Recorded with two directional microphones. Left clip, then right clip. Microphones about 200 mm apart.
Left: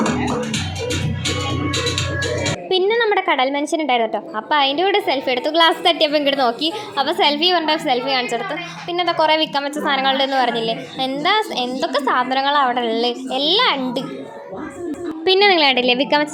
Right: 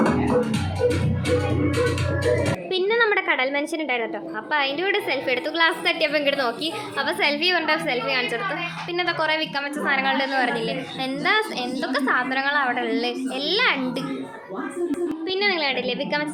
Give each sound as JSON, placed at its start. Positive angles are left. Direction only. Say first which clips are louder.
{"t": 2.6, "sound": "a woman's voice", "louder": "left 4 dB", "side_deg": 20}
{"t": 15.2, "sound": "a woman's voice", "louder": "left 11 dB", "side_deg": 40}